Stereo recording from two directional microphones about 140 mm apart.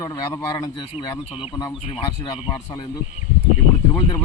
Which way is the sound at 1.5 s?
30° left (ahead or behind).